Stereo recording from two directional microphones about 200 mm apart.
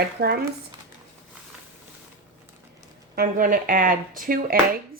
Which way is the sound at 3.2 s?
45° right (ahead or behind).